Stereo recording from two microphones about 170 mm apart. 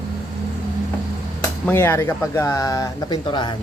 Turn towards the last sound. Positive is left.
turn(degrees=25)  # may be behind; listen again after turning